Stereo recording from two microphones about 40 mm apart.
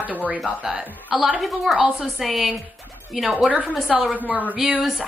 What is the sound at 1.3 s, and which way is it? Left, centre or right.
Speech, centre.